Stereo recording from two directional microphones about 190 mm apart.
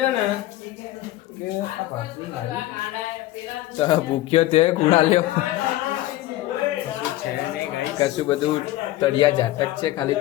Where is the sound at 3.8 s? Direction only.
30° left (ahead or behind).